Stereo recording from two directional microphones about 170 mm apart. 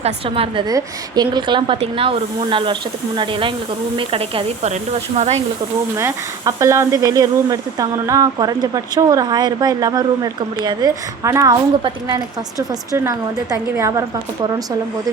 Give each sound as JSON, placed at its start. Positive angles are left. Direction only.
{"t": 0.0, "sound": "speech", "side_deg": -35}
{"t": 3.9, "sound": "speech", "side_deg": -30}
{"t": 6.0, "sound": "speech", "side_deg": -15}